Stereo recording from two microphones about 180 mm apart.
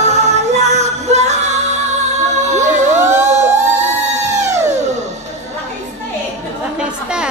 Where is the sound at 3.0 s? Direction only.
15° right (ahead or behind).